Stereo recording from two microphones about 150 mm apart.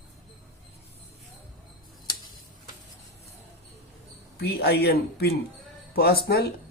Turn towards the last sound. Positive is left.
turn(degrees=90)